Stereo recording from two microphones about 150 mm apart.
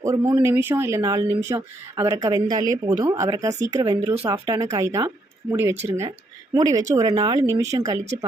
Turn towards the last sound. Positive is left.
turn(degrees=-25)  # may be behind; listen again after turning